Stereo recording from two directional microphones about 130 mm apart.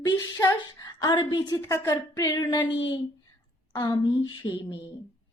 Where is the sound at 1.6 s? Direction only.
20° left (ahead or behind).